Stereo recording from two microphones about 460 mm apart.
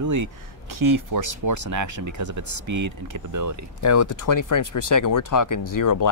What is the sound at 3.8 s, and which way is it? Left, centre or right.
Speech, left.